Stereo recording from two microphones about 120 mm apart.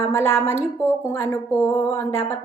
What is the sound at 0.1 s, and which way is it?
A woman's voice, 20° left (ahead or behind).